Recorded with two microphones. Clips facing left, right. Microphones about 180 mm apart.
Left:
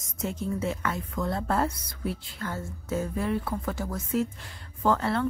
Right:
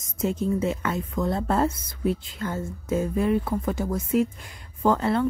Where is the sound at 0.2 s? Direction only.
20° right (ahead or behind).